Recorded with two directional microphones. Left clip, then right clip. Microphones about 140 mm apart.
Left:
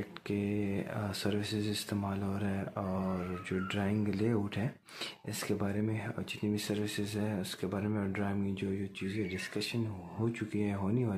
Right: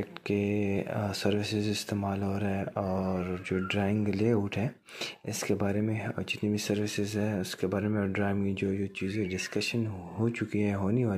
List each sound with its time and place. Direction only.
0.3 s speech: 25° right (ahead or behind)
5.5 s speech: 25° right (ahead or behind)